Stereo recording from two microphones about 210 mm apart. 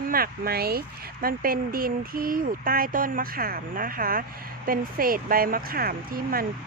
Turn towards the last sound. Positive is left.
turn(degrees=-45)  # may be behind; listen again after turning